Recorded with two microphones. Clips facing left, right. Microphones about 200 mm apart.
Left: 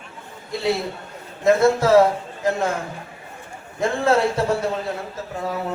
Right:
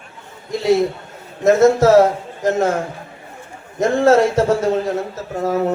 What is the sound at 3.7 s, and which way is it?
A man's voice, 45° right (ahead or behind).